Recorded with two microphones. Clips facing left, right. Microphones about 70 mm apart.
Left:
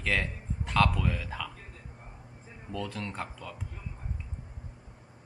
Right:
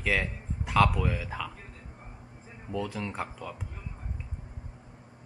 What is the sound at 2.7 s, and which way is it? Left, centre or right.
Speech, centre.